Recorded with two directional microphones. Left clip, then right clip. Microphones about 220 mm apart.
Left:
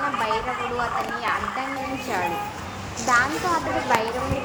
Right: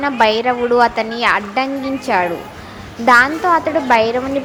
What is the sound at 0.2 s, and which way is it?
A woman's voice, 35° right (ahead or behind).